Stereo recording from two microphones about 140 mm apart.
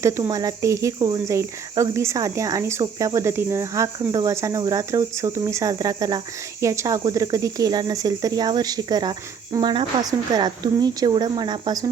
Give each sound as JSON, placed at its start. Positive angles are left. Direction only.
{"t": 0.0, "sound": "speech", "side_deg": -25}